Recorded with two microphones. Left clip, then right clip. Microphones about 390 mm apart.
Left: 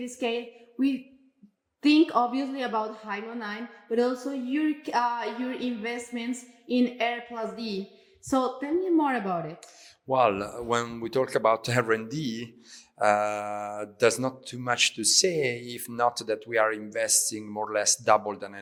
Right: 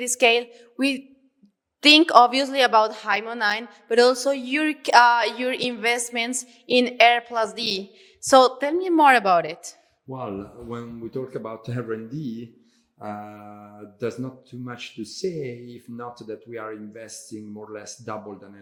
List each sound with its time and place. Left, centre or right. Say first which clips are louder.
0.0 s a woman's voice: right 11 dB; right
10.1 s speech: left 10 dB; left
13.0 s mantra: left 12 dB; left
13.4 s mantra: left 10 dB; centre
13.7 s speech: left 6 dB; left